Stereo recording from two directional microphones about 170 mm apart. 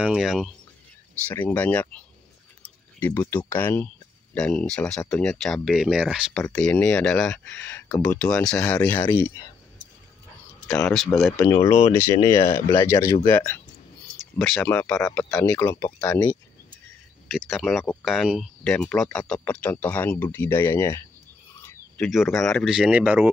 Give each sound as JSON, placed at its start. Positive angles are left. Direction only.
{"t": 0.0, "sound": "speech", "side_deg": -5}
{"t": 1.2, "sound": "speech", "side_deg": 10}
{"t": 11.1, "sound": "speech", "side_deg": 0}
{"t": 11.6, "sound": "speech", "side_deg": 35}
{"t": 11.9, "sound": "speech", "side_deg": 15}
{"t": 14.4, "sound": "speech", "side_deg": 5}
{"t": 17.3, "sound": "speech", "side_deg": 0}